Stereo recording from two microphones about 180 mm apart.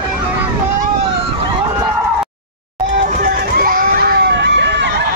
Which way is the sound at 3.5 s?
50° right (ahead or behind).